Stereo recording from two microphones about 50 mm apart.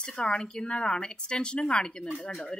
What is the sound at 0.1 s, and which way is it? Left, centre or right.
Speech, centre.